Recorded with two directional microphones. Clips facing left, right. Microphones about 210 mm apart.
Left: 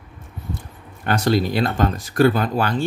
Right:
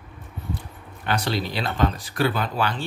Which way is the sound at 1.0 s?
45° left (ahead or behind).